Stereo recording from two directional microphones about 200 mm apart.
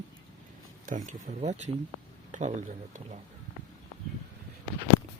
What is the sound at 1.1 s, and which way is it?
Speech, 35° right (ahead or behind).